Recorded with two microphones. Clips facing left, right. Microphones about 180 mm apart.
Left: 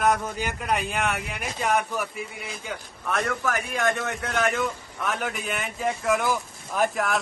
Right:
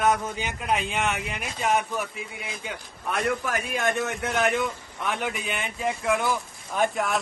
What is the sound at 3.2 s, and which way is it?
A man's voice, 25° right (ahead or behind).